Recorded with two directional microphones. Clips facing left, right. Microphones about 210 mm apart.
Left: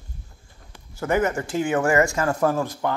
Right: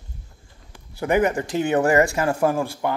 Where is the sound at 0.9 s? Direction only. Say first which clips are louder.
Right 2 dB; 15° right (ahead or behind).